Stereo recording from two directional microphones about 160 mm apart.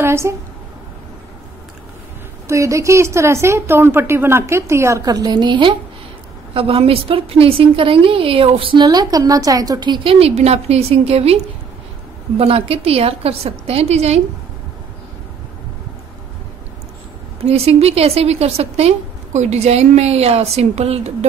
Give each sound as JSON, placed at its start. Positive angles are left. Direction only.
{"t": 0.0, "sound": "a woman's voice", "side_deg": -15}
{"t": 2.4, "sound": "a woman's voice", "side_deg": -20}
{"t": 17.5, "sound": "a woman's voice", "side_deg": -40}